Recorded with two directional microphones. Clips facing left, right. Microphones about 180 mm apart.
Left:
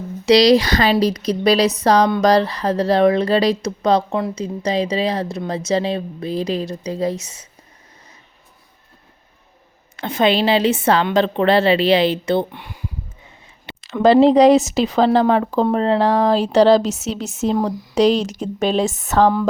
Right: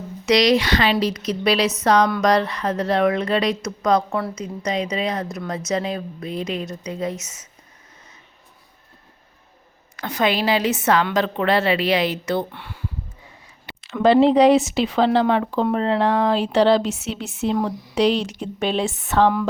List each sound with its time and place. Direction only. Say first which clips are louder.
0.3 s a woman's voice: left 5 dB; 35° left (ahead or behind)
10.0 s a woman's voice: left 4 dB; 25° left (ahead or behind)
13.8 s a woman's voice: left 3 dB; 40° left (ahead or behind)